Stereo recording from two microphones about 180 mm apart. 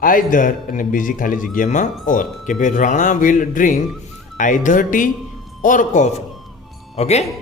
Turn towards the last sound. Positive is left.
turn(degrees=35)  # may be behind; listen again after turning